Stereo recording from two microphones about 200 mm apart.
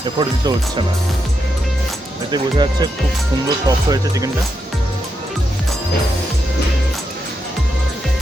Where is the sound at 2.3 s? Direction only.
20° right (ahead or behind).